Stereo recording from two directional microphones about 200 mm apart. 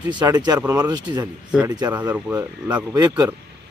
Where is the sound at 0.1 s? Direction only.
20° right (ahead or behind).